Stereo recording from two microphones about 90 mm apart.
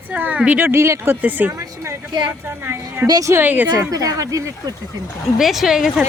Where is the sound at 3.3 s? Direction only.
20° right (ahead or behind).